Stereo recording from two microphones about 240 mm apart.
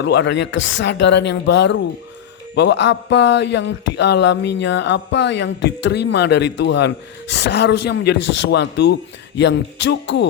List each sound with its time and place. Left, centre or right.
0.0 s speech: left
8.2 s speech: left
8.4 s speech: left